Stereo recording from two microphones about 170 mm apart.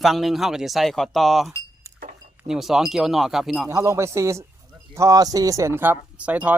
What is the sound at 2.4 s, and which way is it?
Speech, centre (ahead or behind).